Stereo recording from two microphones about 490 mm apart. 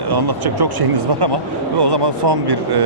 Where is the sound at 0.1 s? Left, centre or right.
Right.